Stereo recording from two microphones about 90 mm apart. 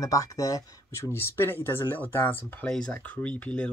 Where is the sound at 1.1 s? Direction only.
30° left (ahead or behind).